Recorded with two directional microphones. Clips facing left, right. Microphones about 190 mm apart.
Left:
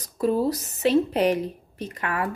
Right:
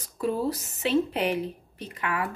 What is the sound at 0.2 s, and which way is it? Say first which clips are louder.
A woman's voice: left 5 dB; 40° left (ahead or behind).